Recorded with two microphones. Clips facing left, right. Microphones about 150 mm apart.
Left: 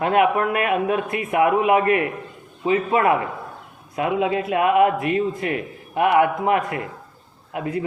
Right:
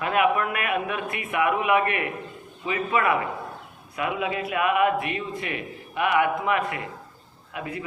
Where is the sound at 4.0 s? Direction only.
30° left (ahead or behind).